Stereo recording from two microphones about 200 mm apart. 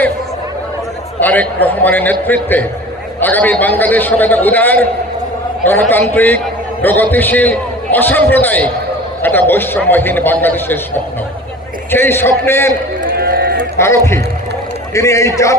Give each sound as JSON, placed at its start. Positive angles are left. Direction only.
{"t": 1.2, "sound": "a man's voice", "side_deg": 10}
{"t": 13.0, "sound": "run", "side_deg": -50}
{"t": 13.7, "sound": "a man's voice", "side_deg": 15}